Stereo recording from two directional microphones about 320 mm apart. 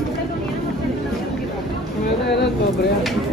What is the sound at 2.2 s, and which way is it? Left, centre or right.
Vehicle, left.